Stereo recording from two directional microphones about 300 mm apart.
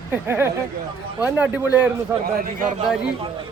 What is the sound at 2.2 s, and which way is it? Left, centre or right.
Speech, right.